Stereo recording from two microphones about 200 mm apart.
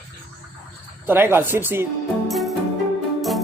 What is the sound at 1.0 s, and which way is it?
Speech, 10° right (ahead or behind).